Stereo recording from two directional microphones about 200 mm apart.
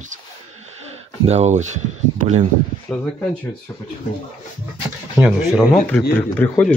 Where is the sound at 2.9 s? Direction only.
5° left (ahead or behind).